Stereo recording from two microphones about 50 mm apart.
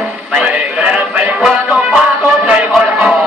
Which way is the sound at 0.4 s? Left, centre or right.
Right.